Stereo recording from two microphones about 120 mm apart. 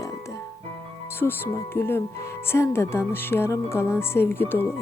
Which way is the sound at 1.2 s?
20° left (ahead or behind).